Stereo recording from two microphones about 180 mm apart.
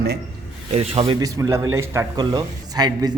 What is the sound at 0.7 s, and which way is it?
Speech, 35° right (ahead or behind).